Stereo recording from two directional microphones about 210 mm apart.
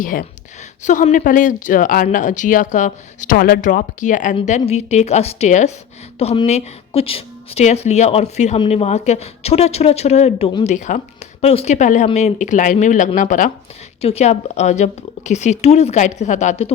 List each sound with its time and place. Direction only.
0.0 s a woman's voice: 40° left (ahead or behind)